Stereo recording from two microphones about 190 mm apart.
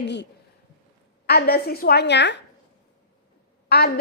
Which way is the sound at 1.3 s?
55° left (ahead or behind).